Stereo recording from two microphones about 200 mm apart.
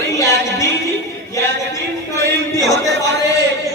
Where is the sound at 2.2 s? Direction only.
15° left (ahead or behind).